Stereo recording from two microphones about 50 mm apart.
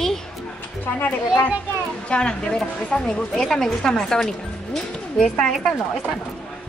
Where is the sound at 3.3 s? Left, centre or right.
Centre.